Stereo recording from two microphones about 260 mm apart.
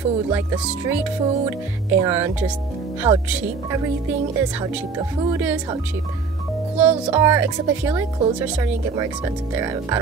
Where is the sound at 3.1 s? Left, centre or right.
Right.